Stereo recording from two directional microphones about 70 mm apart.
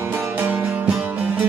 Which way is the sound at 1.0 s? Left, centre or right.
Right.